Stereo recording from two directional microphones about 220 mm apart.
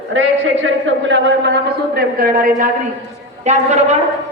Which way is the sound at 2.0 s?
40° right (ahead or behind).